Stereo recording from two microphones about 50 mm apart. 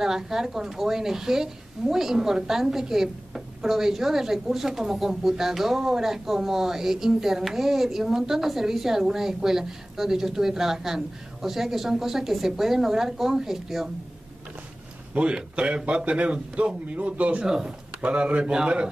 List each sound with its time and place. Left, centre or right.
0.0 s speech: centre
15.1 s a man's voice: right